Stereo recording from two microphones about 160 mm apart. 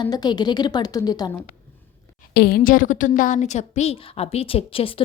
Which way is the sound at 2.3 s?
75° left (ahead or behind).